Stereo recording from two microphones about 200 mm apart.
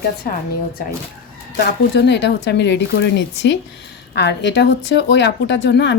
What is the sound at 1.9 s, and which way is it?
A woman's voice, 60° left (ahead or behind).